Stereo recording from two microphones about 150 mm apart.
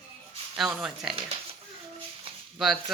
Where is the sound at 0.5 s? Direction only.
5° right (ahead or behind).